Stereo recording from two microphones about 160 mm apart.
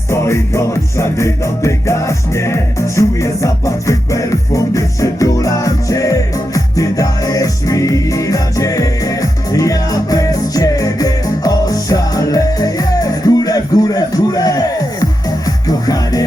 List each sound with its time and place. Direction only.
0.1 s music: 15° left (ahead or behind)